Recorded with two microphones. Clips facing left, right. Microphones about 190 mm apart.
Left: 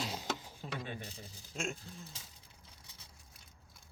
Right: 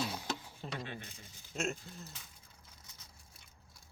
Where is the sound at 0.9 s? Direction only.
35° left (ahead or behind).